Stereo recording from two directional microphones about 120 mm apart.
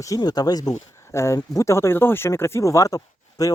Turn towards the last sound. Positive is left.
turn(degrees=30)  # may be behind; listen again after turning